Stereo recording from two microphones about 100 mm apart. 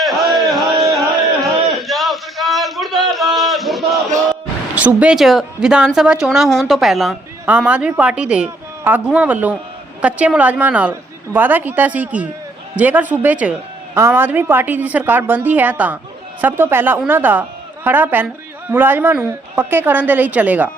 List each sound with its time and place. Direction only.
0.0 s a sound: centre (ahead or behind)
4.7 s speech: 15° right (ahead or behind)
5.1 s speech: centre (ahead or behind)
7.4 s a woman's voice: 10° right (ahead or behind)